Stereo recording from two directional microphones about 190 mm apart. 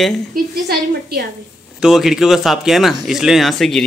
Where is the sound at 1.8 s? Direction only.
Centre (ahead or behind).